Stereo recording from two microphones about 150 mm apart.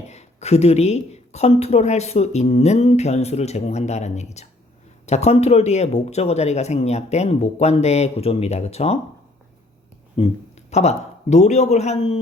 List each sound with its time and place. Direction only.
0.1 s a woman's voice: 50° left (ahead or behind)
10.2 s a woman's voice: 40° left (ahead or behind)